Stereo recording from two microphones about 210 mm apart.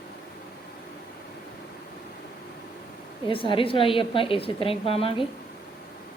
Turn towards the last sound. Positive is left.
turn(degrees=25)  # may be behind; listen again after turning